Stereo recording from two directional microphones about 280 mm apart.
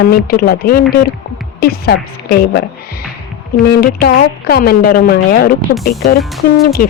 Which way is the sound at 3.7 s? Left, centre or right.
Left.